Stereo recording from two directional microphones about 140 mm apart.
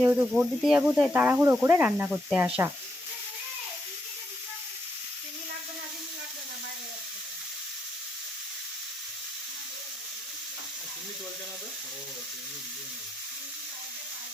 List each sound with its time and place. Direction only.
0.0 s speech: 10° right (ahead or behind)